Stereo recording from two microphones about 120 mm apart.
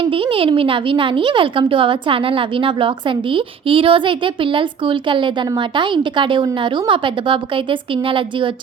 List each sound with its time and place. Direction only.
0.0 s speech: 50° right (ahead or behind)